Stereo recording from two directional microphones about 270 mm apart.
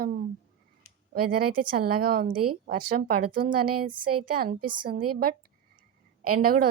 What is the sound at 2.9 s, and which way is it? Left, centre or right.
Speech, right.